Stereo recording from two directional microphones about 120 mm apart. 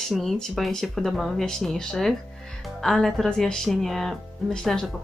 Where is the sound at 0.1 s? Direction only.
Centre (ahead or behind).